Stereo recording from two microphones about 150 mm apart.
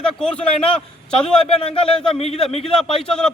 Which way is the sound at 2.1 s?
45° left (ahead or behind).